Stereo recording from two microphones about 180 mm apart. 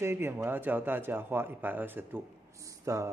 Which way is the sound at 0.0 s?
15° right (ahead or behind).